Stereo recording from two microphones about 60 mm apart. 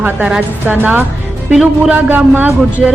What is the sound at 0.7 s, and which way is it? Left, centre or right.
Speech, right.